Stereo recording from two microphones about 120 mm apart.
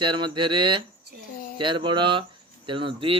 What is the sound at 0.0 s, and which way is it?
Speech, 40° right (ahead or behind).